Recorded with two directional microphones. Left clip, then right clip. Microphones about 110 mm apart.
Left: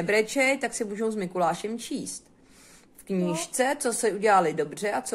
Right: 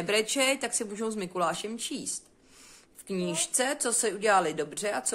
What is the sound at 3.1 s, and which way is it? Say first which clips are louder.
A woman's voice: left 2 dB; 15° right (ahead or behind).